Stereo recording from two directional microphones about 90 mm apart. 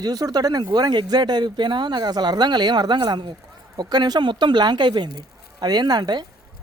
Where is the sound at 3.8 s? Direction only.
50° right (ahead or behind).